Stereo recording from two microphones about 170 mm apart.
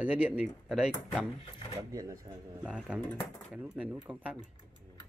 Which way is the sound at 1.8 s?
20° right (ahead or behind).